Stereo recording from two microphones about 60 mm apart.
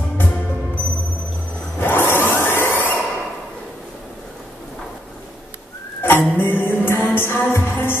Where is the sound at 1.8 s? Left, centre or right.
Left.